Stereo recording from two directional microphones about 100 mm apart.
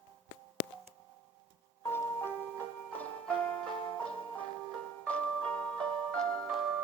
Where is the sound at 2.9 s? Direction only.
10° left (ahead or behind).